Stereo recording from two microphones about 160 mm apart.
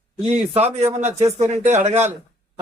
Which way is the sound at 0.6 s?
45° right (ahead or behind).